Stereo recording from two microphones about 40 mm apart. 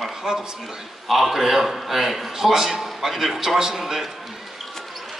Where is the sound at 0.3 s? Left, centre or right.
Centre.